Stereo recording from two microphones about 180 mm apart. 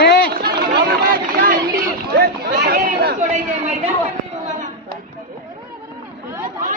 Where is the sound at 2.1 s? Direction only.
60° right (ahead or behind).